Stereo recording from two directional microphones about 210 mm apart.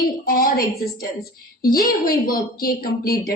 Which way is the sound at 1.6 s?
45° left (ahead or behind).